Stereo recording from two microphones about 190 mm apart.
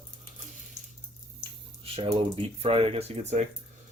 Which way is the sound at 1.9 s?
30° right (ahead or behind).